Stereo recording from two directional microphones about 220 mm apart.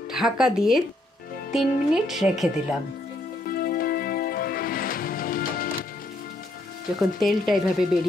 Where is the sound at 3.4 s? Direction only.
40° left (ahead or behind).